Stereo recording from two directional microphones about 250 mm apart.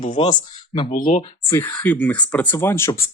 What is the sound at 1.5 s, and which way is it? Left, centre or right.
Speech, centre.